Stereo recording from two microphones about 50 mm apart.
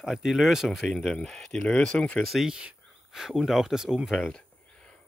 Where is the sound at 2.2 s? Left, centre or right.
Centre.